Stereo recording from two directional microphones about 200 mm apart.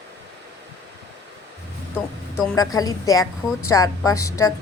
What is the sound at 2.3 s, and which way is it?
A woman's voice, 15° left (ahead or behind).